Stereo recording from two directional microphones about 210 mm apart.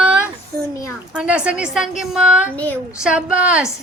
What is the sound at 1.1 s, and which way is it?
Speech, 5° right (ahead or behind).